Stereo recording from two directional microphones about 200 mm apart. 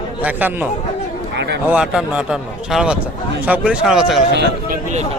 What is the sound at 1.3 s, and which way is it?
Speech, 60° right (ahead or behind).